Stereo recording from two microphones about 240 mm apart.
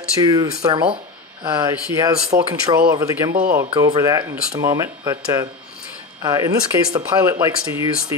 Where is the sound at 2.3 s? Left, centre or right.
Right.